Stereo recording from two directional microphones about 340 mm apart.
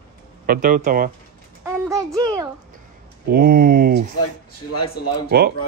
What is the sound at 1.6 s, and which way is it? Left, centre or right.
Speech, centre.